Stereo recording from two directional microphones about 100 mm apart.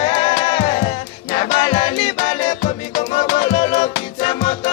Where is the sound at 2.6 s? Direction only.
90° left.